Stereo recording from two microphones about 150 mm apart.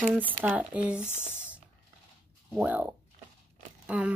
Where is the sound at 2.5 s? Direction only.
10° right (ahead or behind).